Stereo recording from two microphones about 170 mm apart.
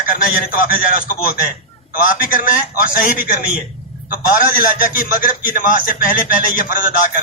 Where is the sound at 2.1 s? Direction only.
55° left (ahead or behind).